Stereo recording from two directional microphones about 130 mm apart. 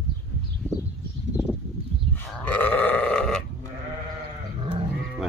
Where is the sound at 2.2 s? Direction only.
15° left (ahead or behind).